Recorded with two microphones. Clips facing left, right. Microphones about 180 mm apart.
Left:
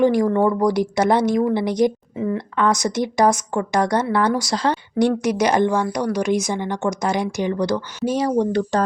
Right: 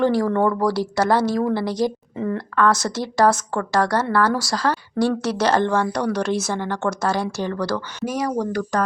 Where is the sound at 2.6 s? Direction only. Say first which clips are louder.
Even; 15° left (ahead or behind).